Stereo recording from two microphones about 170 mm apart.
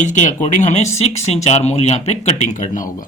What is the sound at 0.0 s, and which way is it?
Speech, 45° left (ahead or behind).